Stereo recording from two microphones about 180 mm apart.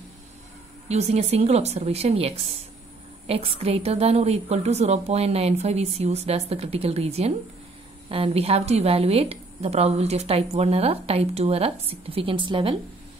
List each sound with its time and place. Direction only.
0.8 s a woman's voice: 35° right (ahead or behind)